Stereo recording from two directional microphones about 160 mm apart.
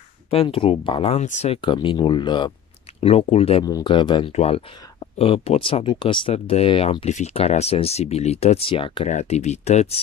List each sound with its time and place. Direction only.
0.3 s speech: 35° left (ahead or behind)
3.0 s speech: 40° left (ahead or behind)
3.6 s speech: 25° left (ahead or behind)
9.0 s speech: 45° left (ahead or behind)